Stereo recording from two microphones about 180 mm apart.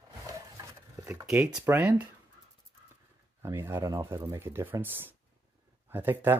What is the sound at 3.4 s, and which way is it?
Speech, 15° right (ahead or behind).